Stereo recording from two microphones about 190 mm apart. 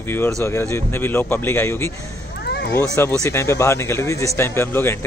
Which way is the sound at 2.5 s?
60° left (ahead or behind).